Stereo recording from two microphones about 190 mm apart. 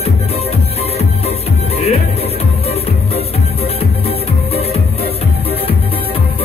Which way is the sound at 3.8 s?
30° left (ahead or behind).